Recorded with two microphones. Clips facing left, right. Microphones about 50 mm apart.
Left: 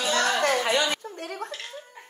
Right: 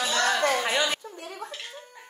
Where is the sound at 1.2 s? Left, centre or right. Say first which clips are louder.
Left 4 dB; left.